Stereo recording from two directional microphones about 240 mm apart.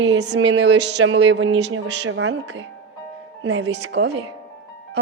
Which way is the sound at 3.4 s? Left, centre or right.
Right.